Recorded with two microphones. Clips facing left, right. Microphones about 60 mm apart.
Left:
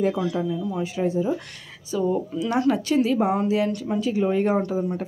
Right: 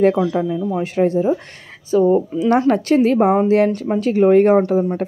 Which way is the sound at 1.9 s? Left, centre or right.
Right.